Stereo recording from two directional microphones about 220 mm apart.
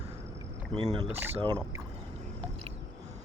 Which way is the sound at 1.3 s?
20° right (ahead or behind).